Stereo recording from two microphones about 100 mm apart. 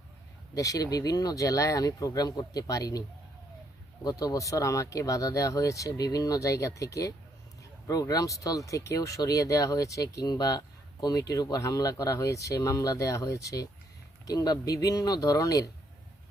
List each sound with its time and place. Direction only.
0.5 s speech: 35° left (ahead or behind)
4.0 s speech: 40° left (ahead or behind)